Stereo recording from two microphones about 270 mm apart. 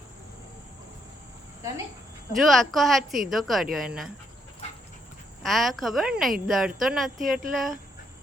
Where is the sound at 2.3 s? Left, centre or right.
Centre.